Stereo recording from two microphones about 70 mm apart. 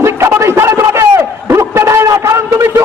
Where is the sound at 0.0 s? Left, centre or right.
Right.